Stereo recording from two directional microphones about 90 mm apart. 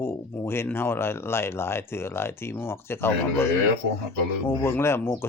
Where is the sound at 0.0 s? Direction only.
25° left (ahead or behind).